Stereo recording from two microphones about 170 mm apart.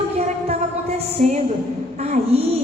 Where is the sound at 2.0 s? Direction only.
40° right (ahead or behind).